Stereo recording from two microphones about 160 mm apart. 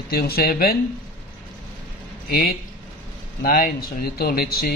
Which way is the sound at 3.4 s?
65° left (ahead or behind).